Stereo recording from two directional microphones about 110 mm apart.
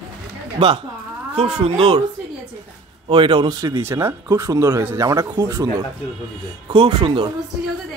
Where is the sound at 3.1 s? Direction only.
50° right (ahead or behind).